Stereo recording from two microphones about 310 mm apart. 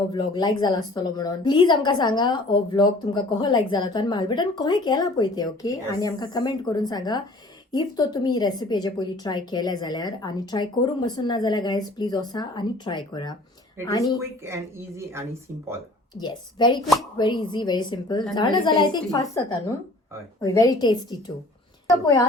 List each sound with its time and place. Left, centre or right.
0.1 s a woman's voice: centre
14.2 s speech: centre
16.2 s a woman's voice: centre
22.0 s a woman's voice: centre